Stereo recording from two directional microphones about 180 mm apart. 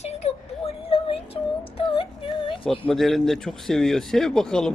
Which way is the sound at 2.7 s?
Centre (ahead or behind).